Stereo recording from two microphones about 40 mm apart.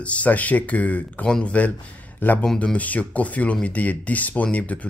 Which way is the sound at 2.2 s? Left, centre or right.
Left.